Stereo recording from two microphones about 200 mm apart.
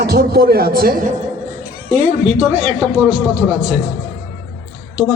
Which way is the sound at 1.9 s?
35° right (ahead or behind).